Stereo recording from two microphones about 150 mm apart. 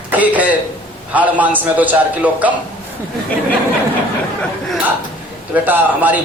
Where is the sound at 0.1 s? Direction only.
10° right (ahead or behind).